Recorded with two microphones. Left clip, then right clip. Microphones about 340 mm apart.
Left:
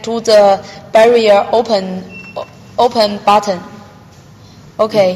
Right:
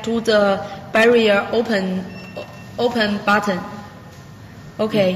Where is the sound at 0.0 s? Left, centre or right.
Centre.